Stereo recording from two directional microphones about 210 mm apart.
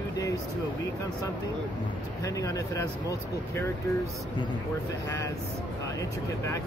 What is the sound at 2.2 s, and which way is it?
Speech, 15° left (ahead or behind).